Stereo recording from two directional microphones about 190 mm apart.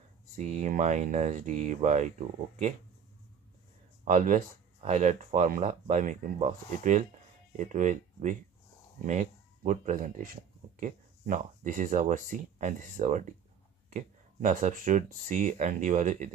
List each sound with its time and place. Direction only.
0.4 s speech: 40° right (ahead or behind)
4.0 s speech: 45° right (ahead or behind)